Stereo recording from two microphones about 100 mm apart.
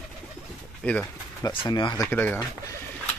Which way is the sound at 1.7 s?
50° left (ahead or behind).